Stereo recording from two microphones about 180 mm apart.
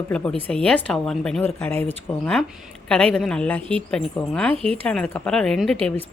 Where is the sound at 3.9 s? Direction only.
5° left (ahead or behind).